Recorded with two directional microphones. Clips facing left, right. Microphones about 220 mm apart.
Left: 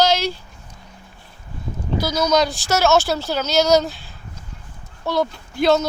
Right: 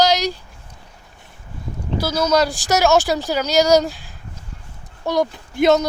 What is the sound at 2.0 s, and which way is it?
Speech, 5° right (ahead or behind).